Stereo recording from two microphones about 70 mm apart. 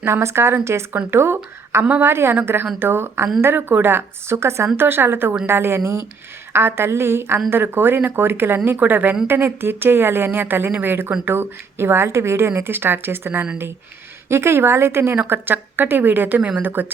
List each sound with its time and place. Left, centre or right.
0.0 s speech: right
1.8 s a woman's voice: right
2.0 s a woman's voice: right